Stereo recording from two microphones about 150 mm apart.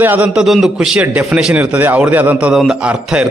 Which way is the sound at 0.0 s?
10° right (ahead or behind).